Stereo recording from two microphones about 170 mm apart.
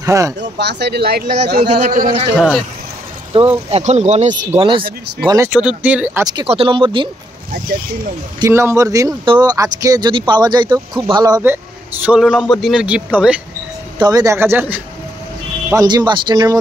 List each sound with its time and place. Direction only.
0.0 s speech: 20° right (ahead or behind)
0.4 s speech: 90° right; by 1.6 s 65° right (ahead or behind)
1.6 s a man's voice: 40° right (ahead or behind)
3.3 s speech: 30° right (ahead or behind)
4.6 s speech: 30° right (ahead or behind)
5.5 s a man's voice: 5° right (ahead or behind)
6.4 s speech: 35° right (ahead or behind)
8.4 s a man's voice: 15° right (ahead or behind)
13.9 s a man's voice: 25° right (ahead or behind)